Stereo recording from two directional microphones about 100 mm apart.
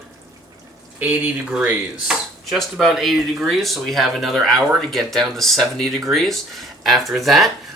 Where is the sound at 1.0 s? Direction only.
15° right (ahead or behind).